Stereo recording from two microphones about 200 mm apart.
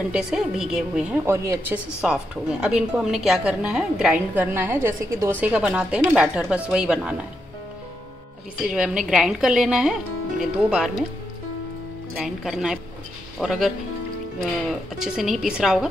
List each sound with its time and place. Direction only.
0.1 s a woman's voice: 5° right (ahead or behind)
8.6 s a woman's voice: 5° right (ahead or behind)
12.2 s a woman's voice: centre (ahead or behind)
14.7 s a woman's voice: centre (ahead or behind)